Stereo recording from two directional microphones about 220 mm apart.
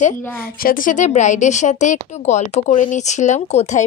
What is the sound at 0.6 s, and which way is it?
Speech, 40° left (ahead or behind).